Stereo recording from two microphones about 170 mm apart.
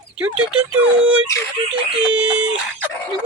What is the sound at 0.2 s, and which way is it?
Speech, 10° right (ahead or behind).